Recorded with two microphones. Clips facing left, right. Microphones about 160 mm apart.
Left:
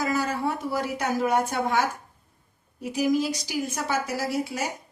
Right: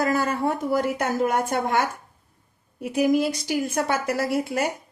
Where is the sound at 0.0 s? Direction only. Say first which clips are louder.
Right 3 dB; 55° right (ahead or behind).